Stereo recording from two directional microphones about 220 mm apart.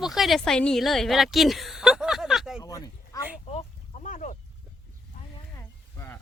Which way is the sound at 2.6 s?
15° left (ahead or behind).